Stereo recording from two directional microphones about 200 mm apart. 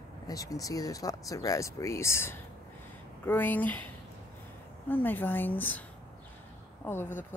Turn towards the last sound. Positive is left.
turn(degrees=10)  # may be behind; listen again after turning